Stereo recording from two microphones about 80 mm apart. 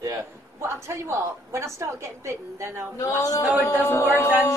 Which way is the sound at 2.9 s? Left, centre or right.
Left.